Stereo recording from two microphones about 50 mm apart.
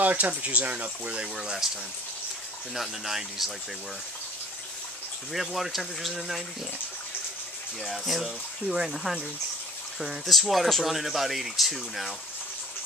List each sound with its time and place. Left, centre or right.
0.0 s speech: right
1.2 s speech: centre
2.7 s speech: centre
5.3 s speech: centre
7.8 s speech: centre